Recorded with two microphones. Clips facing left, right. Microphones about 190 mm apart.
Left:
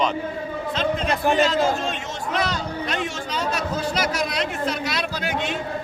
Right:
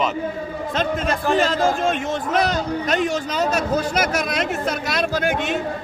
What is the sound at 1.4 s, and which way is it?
A man's voice, 50° right (ahead or behind).